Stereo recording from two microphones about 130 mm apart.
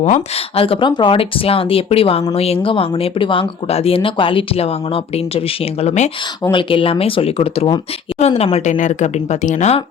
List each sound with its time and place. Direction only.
0.5 s speech: 45° left (ahead or behind)
5.8 s speech: 65° left (ahead or behind)
6.5 s speech: 40° left (ahead or behind)
8.5 s speech: 70° left (ahead or behind)